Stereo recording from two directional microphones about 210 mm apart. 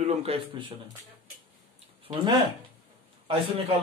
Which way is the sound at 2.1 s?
25° right (ahead or behind).